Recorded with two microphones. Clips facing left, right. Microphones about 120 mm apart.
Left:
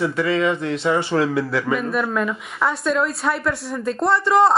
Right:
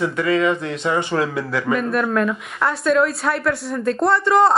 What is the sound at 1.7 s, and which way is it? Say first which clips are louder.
A woman's voice: right 2 dB; centre (ahead or behind).